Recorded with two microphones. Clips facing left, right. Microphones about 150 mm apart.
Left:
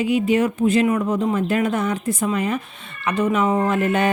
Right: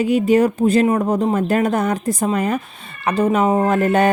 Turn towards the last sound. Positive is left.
turn(degrees=-40)  # may be behind; listen again after turning